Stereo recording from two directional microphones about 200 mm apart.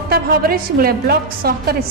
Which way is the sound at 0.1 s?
50° right (ahead or behind).